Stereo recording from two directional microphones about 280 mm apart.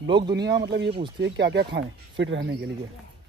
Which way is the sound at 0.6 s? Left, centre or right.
Right.